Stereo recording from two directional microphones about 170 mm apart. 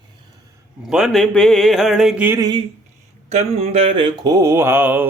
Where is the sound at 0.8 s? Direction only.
5° right (ahead or behind).